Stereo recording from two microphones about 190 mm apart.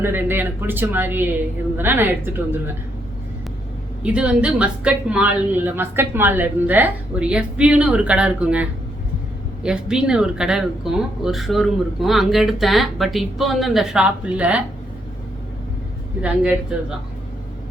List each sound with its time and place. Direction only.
0.0 s a woman's voice: 10° right (ahead or behind)
4.0 s a woman's voice: 5° right (ahead or behind)
16.2 s speech: 5° right (ahead or behind)